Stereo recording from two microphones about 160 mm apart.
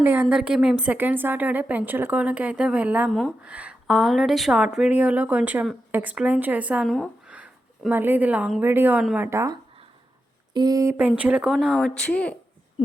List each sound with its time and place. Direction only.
0.0 s a woman's voice: 15° right (ahead or behind)
3.1 s a woman's voice: 5° left (ahead or behind)
3.4 s a woman's voice: 10° right (ahead or behind)
6.8 s a woman's voice: 5° left (ahead or behind)
7.3 s a sound: 10° right (ahead or behind)
8.6 s a woman's voice: 15° right (ahead or behind)
10.9 s a woman's voice: 10° right (ahead or behind); by 12.4 s 10° left (ahead or behind)